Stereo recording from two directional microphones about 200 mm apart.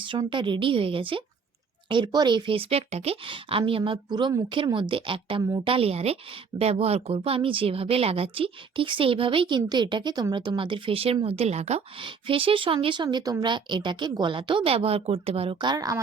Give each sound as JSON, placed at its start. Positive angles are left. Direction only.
{"t": 0.0, "sound": "speech", "side_deg": -25}